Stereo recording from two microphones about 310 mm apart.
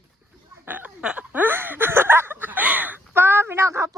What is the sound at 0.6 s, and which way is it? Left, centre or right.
Speech, centre.